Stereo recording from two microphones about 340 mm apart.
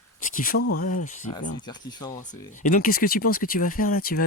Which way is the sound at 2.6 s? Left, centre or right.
Left.